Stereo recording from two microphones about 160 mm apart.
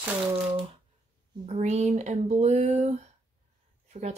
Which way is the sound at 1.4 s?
45° right (ahead or behind).